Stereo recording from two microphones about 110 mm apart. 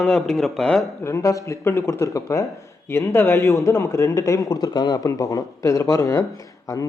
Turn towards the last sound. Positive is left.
turn(degrees=30)  # may be behind; listen again after turning